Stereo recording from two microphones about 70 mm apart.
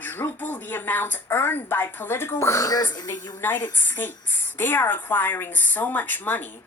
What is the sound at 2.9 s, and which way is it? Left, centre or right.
Speech, left.